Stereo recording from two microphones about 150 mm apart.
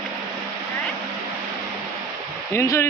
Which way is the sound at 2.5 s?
20° left (ahead or behind).